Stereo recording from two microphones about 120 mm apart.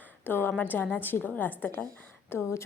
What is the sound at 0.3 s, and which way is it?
A woman's voice, 15° left (ahead or behind).